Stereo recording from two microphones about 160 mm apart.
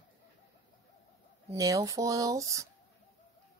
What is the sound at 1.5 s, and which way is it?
Speech, 20° right (ahead or behind).